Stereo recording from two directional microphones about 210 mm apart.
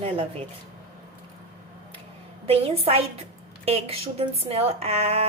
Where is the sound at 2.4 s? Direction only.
25° right (ahead or behind).